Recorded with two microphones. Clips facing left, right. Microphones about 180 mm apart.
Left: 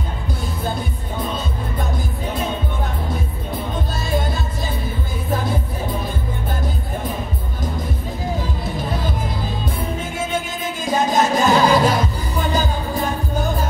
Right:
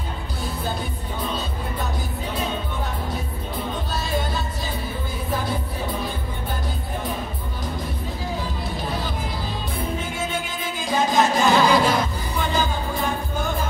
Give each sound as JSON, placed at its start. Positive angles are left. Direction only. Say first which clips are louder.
{"t": 10.9, "sound": "music", "louder": "left 2 dB", "side_deg": 45}